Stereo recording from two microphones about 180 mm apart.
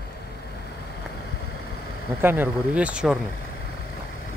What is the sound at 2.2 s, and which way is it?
Speech, 10° right (ahead or behind).